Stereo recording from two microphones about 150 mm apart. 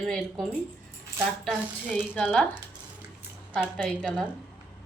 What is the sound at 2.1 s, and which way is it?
Speech, 10° left (ahead or behind).